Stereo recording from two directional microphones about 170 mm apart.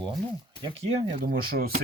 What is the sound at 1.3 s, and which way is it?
Speech, 60° right (ahead or behind).